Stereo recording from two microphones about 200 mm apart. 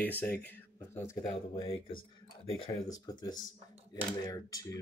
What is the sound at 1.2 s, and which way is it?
Speech, 25° left (ahead or behind).